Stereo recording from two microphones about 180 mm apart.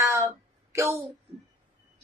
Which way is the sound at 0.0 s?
15° right (ahead or behind).